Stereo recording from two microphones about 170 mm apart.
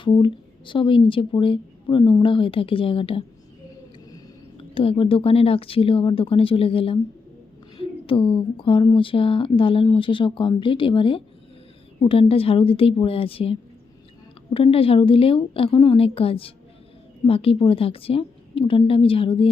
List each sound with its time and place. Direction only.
0.0 s speech: 30° left (ahead or behind)